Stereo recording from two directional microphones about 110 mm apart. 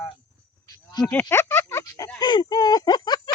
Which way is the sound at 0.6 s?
40° left (ahead or behind).